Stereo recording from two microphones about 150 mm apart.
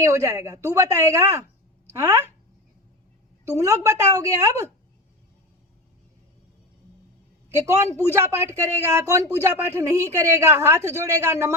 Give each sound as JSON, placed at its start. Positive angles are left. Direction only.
{"t": 0.0, "sound": "speech", "side_deg": -20}
{"t": 3.6, "sound": "speech", "side_deg": -20}
{"t": 7.7, "sound": "a woman's voice", "side_deg": -20}